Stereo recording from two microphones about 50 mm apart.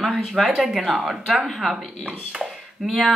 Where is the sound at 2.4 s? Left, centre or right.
Centre.